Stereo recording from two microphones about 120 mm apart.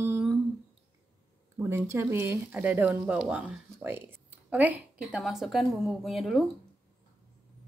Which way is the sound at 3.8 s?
15° right (ahead or behind).